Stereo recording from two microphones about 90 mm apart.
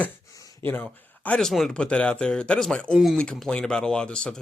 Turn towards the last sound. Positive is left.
turn(degrees=10)  # may be behind; listen again after turning